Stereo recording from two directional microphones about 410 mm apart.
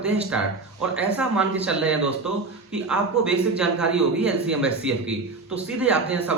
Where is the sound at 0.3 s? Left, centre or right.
Centre.